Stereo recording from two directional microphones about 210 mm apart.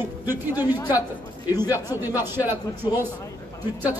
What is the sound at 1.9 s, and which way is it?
Speech, 10° right (ahead or behind).